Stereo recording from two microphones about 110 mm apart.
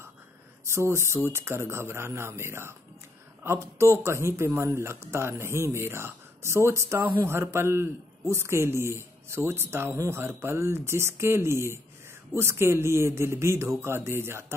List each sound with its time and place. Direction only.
0.7 s speech: 25° right (ahead or behind)